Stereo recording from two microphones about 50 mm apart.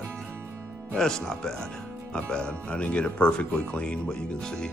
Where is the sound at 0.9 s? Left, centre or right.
Centre.